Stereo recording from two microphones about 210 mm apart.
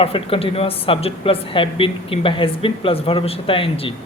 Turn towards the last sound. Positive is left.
turn(degrees=25)  # may be behind; listen again after turning